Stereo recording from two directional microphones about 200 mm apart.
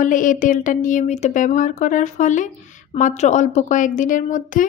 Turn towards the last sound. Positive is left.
turn(degrees=40)  # may be behind; listen again after turning